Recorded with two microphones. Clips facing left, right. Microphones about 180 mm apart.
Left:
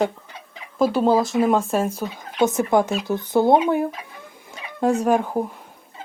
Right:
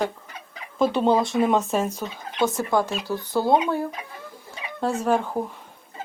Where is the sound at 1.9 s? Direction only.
20° left (ahead or behind).